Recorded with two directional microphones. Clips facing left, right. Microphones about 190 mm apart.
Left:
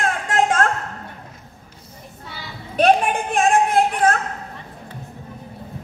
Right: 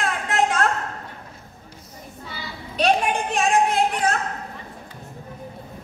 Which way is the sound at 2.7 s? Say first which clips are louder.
Left 4 dB; 50° left (ahead or behind).